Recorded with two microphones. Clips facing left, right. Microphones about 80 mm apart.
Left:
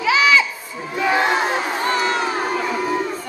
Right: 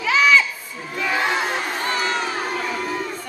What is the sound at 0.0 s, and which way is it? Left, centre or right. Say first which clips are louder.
Crowd: left 1 dB; centre.